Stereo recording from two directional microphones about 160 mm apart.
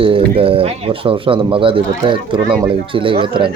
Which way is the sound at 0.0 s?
35° right (ahead or behind).